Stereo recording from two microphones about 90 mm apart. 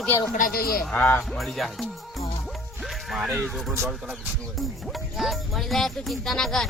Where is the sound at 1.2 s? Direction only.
Centre (ahead or behind).